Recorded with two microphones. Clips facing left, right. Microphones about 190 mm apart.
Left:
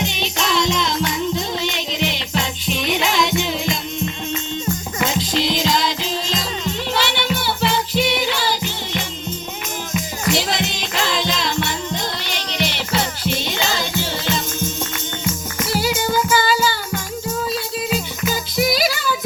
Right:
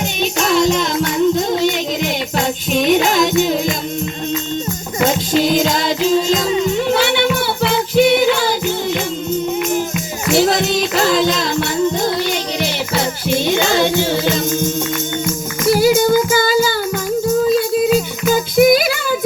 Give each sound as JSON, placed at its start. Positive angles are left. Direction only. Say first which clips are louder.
{"t": 0.0, "sound": "music", "louder": "right 5 dB", "side_deg": -45}
{"t": 5.0, "sound": "music", "louder": "right 6 dB", "side_deg": -45}
{"t": 6.5, "sound": "music", "louder": "right 10 dB", "side_deg": -10}
{"t": 6.9, "sound": "music", "louder": "right 7 dB", "side_deg": -50}
{"t": 10.3, "sound": "music", "louder": "right 12 dB", "side_deg": -45}
{"t": 12.5, "sound": "music", "louder": "right 3 dB", "side_deg": -50}
{"t": 15.6, "sound": "child singing", "louder": "right 9 dB", "side_deg": -50}
{"t": 17.5, "sound": "music", "louder": "right 10 dB", "side_deg": -55}